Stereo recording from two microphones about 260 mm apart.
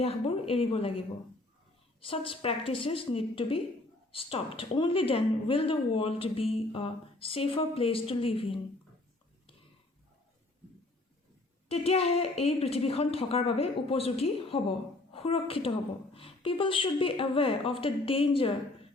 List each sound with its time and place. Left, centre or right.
0.0 s a woman's voice: left
11.7 s a woman's voice: left